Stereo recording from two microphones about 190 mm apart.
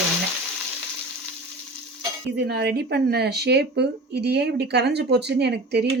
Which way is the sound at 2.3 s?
60° right (ahead or behind).